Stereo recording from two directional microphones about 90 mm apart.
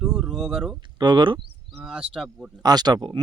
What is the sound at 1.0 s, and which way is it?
Speech, 60° right (ahead or behind).